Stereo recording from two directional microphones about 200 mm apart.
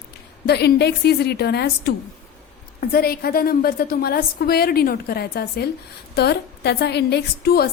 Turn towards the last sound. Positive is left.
turn(degrees=50)  # may be behind; listen again after turning